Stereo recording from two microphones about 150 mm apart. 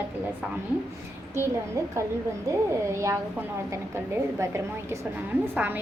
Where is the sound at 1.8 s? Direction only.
20° right (ahead or behind).